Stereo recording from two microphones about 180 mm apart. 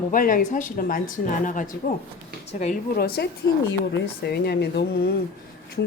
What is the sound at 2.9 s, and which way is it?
Speech, 60° left (ahead or behind).